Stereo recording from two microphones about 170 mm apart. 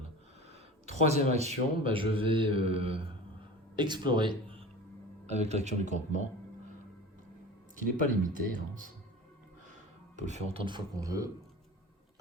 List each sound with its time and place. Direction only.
0.9 s a man's voice: 40° right (ahead or behind)
5.2 s a man's voice: 40° right (ahead or behind)
7.8 s speech: 50° right (ahead or behind)
10.2 s speech: 45° right (ahead or behind)
10.7 s speech: 25° right (ahead or behind)